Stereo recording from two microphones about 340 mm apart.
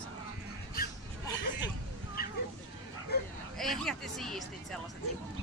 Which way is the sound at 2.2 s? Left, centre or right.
Left.